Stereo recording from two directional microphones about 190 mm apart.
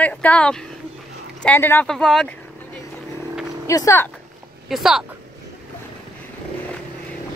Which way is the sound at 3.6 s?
15° left (ahead or behind).